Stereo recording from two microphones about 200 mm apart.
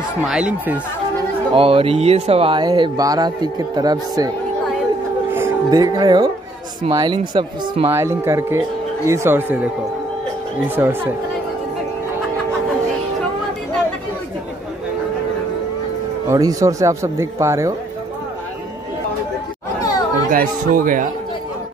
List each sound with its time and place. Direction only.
0.3 s speech: 5° right (ahead or behind)
1.5 s speech: 30° right (ahead or behind)
5.3 s speech: 15° right (ahead or behind)
7.9 s speech: 15° right (ahead or behind)
10.8 s speech: 10° right (ahead or behind)
16.3 s speech: 15° right (ahead or behind)
19.8 s chatter: 20° left (ahead or behind)
20.2 s speech: 45° right (ahead or behind)